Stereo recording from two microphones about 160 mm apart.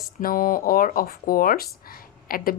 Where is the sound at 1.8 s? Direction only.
65° left (ahead or behind).